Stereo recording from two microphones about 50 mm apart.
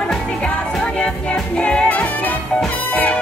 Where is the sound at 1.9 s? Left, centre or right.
Left.